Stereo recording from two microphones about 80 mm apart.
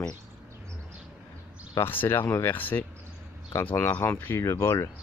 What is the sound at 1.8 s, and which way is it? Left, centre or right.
Speech, left.